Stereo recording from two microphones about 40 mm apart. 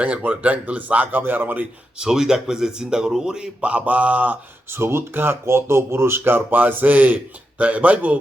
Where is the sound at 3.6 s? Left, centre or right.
Right.